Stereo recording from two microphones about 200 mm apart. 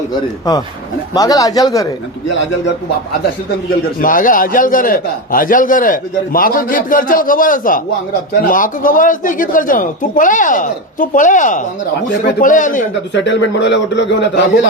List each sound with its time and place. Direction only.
1.1 s speech: 15° left (ahead or behind)
4.0 s a man's voice: 45° left (ahead or behind)
13.2 s a man's voice: 65° left (ahead or behind)